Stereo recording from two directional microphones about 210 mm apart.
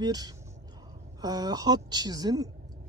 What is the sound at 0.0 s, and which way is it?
Speech, 20° right (ahead or behind).